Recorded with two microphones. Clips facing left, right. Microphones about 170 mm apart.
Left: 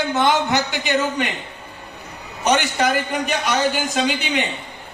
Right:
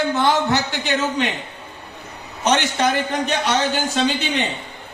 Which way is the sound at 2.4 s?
10° left (ahead or behind).